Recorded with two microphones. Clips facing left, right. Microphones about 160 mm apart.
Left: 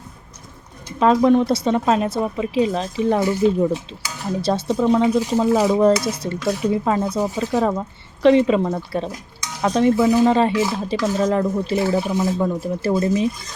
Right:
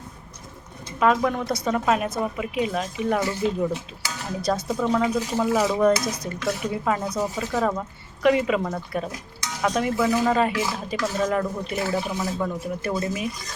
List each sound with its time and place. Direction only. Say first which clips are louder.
0.9 s speech: left 7 dB; 30° left (ahead or behind)
4.8 s speech: left 7 dB; 15° left (ahead or behind)
5.0 s speech: left 6 dB; 25° left (ahead or behind)